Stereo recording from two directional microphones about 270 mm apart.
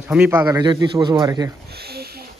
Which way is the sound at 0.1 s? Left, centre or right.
Centre.